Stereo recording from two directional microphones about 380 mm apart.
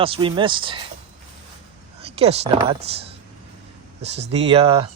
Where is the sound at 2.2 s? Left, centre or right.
Centre.